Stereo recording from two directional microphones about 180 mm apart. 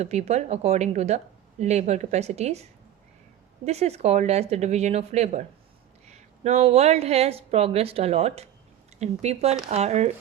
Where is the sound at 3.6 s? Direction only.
35° right (ahead or behind).